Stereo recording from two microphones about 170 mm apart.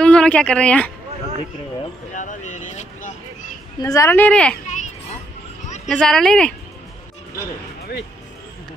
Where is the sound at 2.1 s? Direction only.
45° left (ahead or behind).